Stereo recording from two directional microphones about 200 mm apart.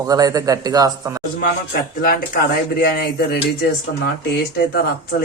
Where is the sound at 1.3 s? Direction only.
45° left (ahead or behind).